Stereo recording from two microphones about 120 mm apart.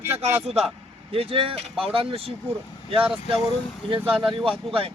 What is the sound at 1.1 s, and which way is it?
A man's voice, 50° right (ahead or behind).